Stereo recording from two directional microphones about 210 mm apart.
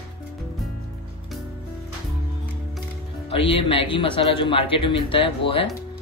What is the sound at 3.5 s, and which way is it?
A man's voice, 25° left (ahead or behind).